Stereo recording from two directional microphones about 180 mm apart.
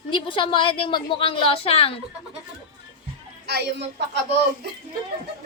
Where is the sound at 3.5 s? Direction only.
65° right (ahead or behind).